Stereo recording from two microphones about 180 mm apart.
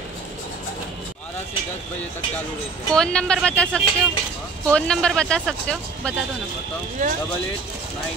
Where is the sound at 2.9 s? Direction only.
5° left (ahead or behind).